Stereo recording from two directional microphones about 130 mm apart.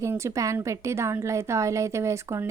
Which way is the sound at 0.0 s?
25° right (ahead or behind).